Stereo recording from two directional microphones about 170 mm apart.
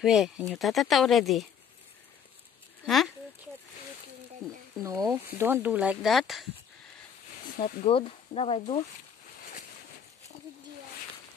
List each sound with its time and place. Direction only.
0.0 s speech: centre (ahead or behind)
4.8 s speech: 20° right (ahead or behind); by 6.5 s centre (ahead or behind)
7.5 s speech: 50° left (ahead or behind)
7.8 s speech: 35° left (ahead or behind)